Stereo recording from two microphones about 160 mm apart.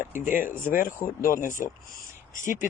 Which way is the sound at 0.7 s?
60° left (ahead or behind).